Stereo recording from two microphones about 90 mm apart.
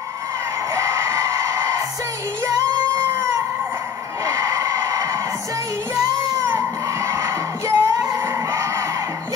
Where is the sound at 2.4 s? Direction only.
40° right (ahead or behind).